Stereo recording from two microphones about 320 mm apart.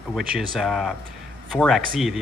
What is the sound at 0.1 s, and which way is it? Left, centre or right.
Speech, centre.